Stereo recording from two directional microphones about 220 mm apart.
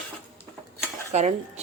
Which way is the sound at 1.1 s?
30° right (ahead or behind).